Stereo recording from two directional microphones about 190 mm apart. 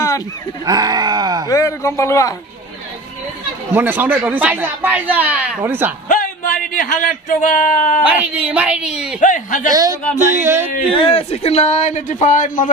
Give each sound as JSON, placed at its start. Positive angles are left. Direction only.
{"t": 0.7, "sound": "groan", "side_deg": -20}
{"t": 1.5, "sound": "a man's voice", "side_deg": 15}
{"t": 3.7, "sound": "speech", "side_deg": -10}
{"t": 6.0, "sound": "a man's voice", "side_deg": 45}
{"t": 8.0, "sound": "speech", "side_deg": -10}
{"t": 9.2, "sound": "a man's voice", "side_deg": 45}
{"t": 9.7, "sound": "groan", "side_deg": -20}
{"t": 10.1, "sound": "speech", "side_deg": -15}
{"t": 11.0, "sound": "a man's voice", "side_deg": 30}